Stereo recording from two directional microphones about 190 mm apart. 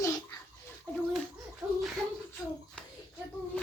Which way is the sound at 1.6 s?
15° right (ahead or behind).